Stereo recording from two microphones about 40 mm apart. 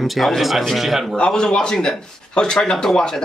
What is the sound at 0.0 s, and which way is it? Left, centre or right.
A man's voice, centre.